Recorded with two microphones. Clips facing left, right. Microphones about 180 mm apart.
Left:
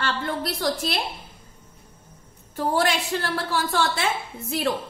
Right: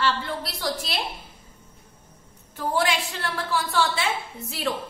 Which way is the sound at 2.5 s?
40° left (ahead or behind).